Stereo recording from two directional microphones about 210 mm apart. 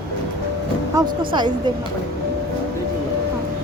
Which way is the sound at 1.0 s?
15° right (ahead or behind).